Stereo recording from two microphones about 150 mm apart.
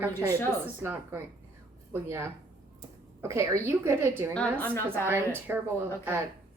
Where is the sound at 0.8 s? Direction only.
15° right (ahead or behind).